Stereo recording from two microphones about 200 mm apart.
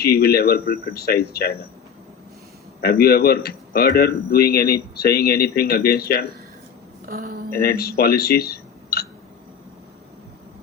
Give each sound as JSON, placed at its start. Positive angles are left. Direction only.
{"t": 0.0, "sound": "a man's voice", "side_deg": 50}
{"t": 2.8, "sound": "a man's voice", "side_deg": 50}
{"t": 7.0, "sound": "speech", "side_deg": -45}
{"t": 7.5, "sound": "speech", "side_deg": 50}